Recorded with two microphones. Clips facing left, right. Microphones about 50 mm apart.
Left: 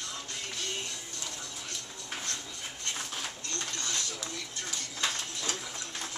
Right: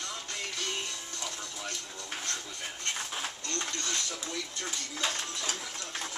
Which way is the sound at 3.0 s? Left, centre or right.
Centre.